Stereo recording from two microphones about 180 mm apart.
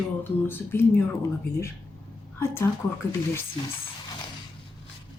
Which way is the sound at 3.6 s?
25° left (ahead or behind).